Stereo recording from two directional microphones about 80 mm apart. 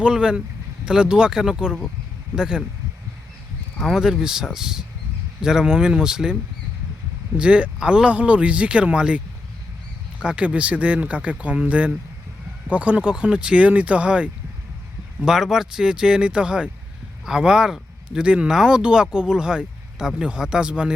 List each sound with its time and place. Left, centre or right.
0.0 s speech: centre
3.8 s speech: centre
7.3 s speech: centre